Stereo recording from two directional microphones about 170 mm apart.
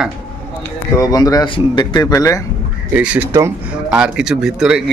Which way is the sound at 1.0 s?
20° left (ahead or behind).